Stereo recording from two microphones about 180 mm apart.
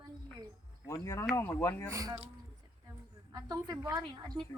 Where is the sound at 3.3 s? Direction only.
20° right (ahead or behind).